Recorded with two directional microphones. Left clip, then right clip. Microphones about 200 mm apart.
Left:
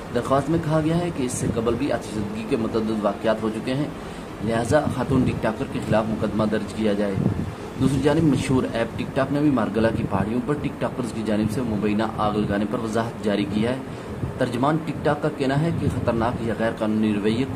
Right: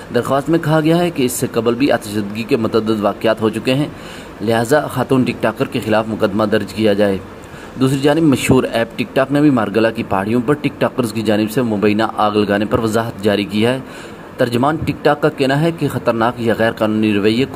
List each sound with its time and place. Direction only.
0.1 s speech: 30° right (ahead or behind)